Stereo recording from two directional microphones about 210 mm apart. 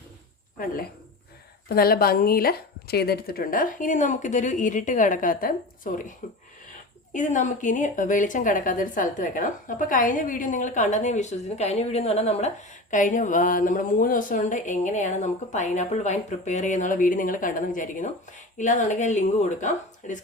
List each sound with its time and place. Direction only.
1.7 s a woman's voice: 45° left (ahead or behind)